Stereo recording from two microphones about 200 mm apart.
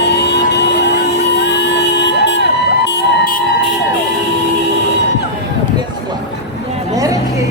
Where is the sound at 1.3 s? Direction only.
60° left (ahead or behind).